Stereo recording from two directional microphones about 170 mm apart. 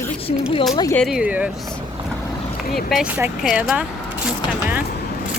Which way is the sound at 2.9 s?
5° right (ahead or behind).